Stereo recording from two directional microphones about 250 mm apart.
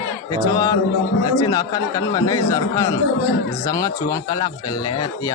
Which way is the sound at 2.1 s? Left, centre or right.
Centre.